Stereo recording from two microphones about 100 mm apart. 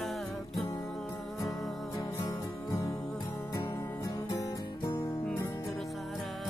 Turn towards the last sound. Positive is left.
turn(degrees=30)  # may be behind; listen again after turning